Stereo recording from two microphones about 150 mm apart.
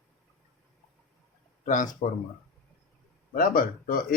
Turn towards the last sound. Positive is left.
turn(degrees=70)  # may be behind; listen again after turning